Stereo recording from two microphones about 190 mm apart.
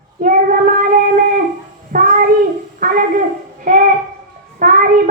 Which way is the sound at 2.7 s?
45° right (ahead or behind).